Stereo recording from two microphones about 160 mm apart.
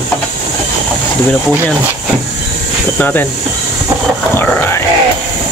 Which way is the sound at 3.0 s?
10° left (ahead or behind).